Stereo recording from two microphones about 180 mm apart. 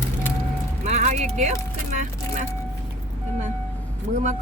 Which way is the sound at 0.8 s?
40° right (ahead or behind).